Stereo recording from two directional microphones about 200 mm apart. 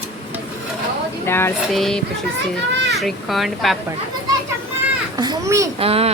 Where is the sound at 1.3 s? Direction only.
10° left (ahead or behind).